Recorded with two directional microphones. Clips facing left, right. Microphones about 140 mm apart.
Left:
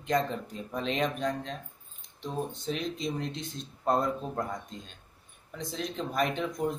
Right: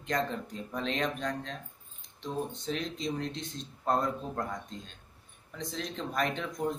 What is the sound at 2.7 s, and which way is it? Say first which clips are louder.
Speech: left 1 dB; 10° left (ahead or behind).